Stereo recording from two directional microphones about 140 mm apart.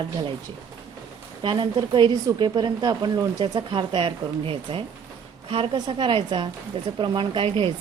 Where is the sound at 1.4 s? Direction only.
35° right (ahead or behind).